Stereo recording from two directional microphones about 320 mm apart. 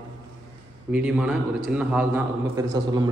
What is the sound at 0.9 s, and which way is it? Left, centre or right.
A man's voice, centre.